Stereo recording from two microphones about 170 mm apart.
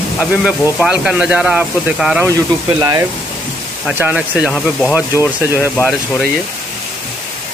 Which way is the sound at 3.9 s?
10° right (ahead or behind).